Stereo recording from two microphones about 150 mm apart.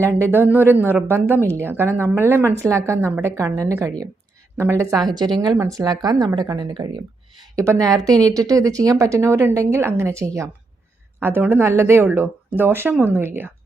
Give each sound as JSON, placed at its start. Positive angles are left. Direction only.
{"t": 0.0, "sound": "speech", "side_deg": -15}